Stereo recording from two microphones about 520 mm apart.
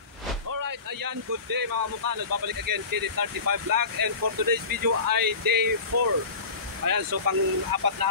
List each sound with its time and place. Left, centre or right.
0.6 s speech: right
5.9 s speech: right
6.8 s speech: right